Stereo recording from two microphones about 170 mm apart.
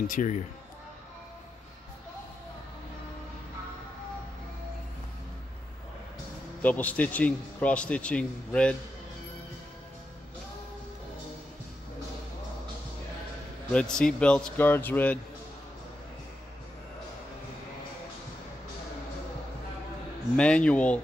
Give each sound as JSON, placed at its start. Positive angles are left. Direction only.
{"t": 0.0, "sound": "speech", "side_deg": 50}
{"t": 6.6, "sound": "a man's voice", "side_deg": 10}
{"t": 13.7, "sound": "a man's voice", "side_deg": 5}
{"t": 20.3, "sound": "a man's voice", "side_deg": 5}